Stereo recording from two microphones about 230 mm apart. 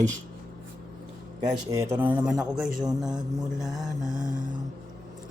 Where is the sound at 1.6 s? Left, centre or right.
Centre.